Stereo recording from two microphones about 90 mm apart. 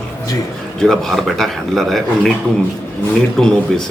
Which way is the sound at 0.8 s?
5° left (ahead or behind).